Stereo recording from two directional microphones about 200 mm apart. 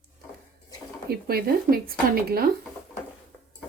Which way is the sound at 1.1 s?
50° right (ahead or behind).